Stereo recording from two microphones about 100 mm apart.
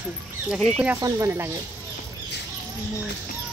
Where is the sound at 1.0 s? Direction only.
30° right (ahead or behind).